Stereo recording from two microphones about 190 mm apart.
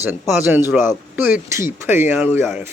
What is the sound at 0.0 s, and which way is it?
Speech, 10° right (ahead or behind).